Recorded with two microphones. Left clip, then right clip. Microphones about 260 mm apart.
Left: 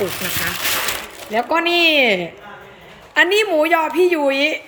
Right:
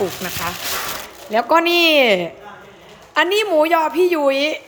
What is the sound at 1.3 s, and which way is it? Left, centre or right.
A woman's voice, centre.